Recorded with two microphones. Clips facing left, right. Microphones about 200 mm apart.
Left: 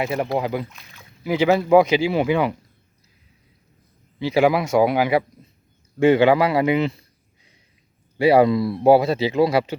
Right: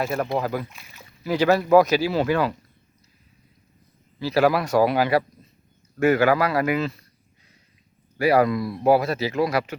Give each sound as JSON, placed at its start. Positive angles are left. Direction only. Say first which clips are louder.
{"t": 0.0, "sound": "speech", "louder": "left 2 dB", "side_deg": 15}
{"t": 0.7, "sound": "speech", "louder": "even", "side_deg": -5}
{"t": 1.2, "sound": "speech", "louder": "left 1 dB", "side_deg": 15}
{"t": 4.2, "sound": "speech", "louder": "left 2 dB", "side_deg": 20}
{"t": 6.0, "sound": "speech", "louder": "left 4 dB", "side_deg": 30}
{"t": 8.2, "sound": "speech", "louder": "left 4 dB", "side_deg": 25}